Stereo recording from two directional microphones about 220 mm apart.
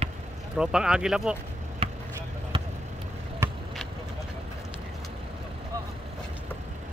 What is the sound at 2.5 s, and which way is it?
Basketball bounce, 20° right (ahead or behind).